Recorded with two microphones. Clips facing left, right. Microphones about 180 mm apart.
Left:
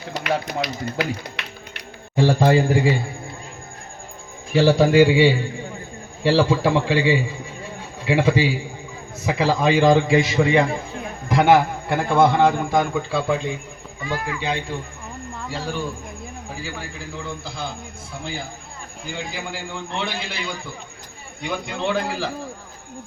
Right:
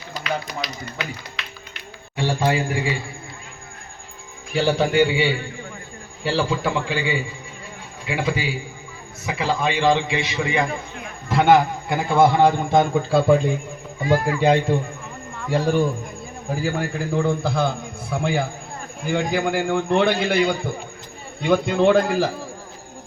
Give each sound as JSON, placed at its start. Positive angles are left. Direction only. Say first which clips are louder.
{"t": 0.1, "sound": "speech", "louder": "left 3 dB", "side_deg": 60}
{"t": 2.1, "sound": "a man's voice", "louder": "left 5 dB", "side_deg": 40}
{"t": 4.5, "sound": "a man's voice", "louder": "left 4 dB", "side_deg": 30}
{"t": 6.3, "sound": "a man's voice", "louder": "left 4 dB", "side_deg": 35}
{"t": 11.3, "sound": "a man's voice", "louder": "even", "side_deg": 10}
{"t": 12.2, "sound": "a man's voice", "louder": "right 1 dB", "side_deg": -15}
{"t": 13.1, "sound": "a man's voice", "louder": "right 6 dB", "side_deg": -45}